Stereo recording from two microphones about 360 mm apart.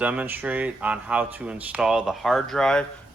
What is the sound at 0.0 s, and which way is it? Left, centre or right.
Speech, centre.